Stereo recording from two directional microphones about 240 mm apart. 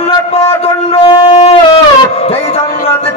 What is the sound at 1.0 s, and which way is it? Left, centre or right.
Wind instrument, left.